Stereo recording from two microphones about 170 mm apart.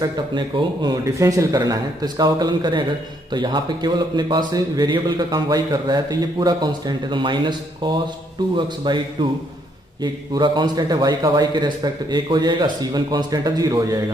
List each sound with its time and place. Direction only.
0.0 s a man's voice: 25° right (ahead or behind)
10.3 s a man's voice: 25° right (ahead or behind)